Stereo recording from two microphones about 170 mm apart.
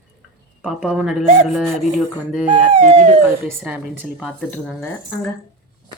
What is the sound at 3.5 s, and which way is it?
Speech, 10° right (ahead or behind).